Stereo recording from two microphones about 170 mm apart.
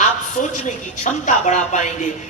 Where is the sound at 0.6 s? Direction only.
45° left (ahead or behind).